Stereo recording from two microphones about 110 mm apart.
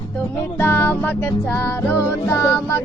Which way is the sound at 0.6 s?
20° left (ahead or behind).